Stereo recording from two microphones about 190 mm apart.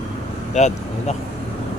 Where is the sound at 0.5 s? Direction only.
40° left (ahead or behind).